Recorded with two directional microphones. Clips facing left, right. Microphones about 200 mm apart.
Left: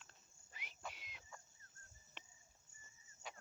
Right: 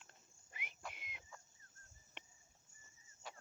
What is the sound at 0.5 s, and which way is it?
Cricket, 55° right (ahead or behind).